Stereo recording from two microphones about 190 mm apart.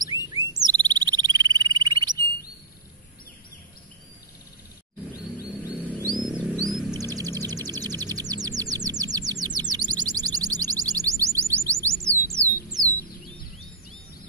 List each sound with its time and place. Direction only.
0.0 s frog: 20° right (ahead or behind)
5.7 s wild animals: 10° right (ahead or behind)
6.1 s wild animals: 25° right (ahead or behind)
6.5 s a sound: centre (ahead or behind)
6.9 s music: 20° right (ahead or behind)